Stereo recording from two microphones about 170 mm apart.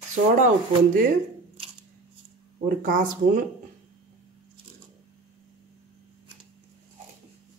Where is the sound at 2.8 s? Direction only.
45° right (ahead or behind).